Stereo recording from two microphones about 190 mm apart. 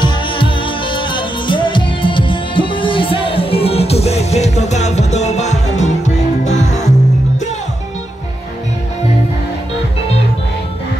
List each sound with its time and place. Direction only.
0.0 s music: 25° left (ahead or behind)